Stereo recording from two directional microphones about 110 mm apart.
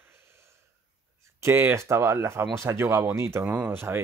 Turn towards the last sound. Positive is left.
turn(degrees=-20)  # may be behind; listen again after turning